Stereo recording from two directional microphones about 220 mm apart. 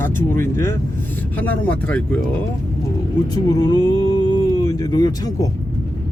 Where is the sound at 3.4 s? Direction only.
20° left (ahead or behind).